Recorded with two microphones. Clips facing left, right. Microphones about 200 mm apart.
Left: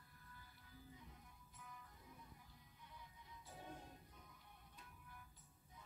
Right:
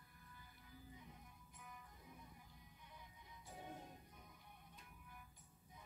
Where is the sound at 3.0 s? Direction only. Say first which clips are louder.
Even; 15° right (ahead or behind).